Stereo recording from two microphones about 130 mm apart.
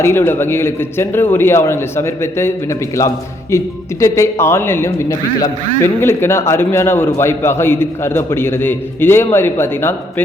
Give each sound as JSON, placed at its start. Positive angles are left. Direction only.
{"t": 0.0, "sound": "speech", "side_deg": 20}